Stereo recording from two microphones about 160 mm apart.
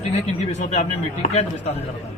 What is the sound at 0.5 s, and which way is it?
Speech, 45° left (ahead or behind).